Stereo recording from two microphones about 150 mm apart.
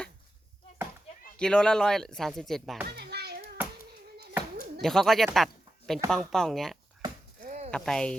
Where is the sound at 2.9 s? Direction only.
90° right.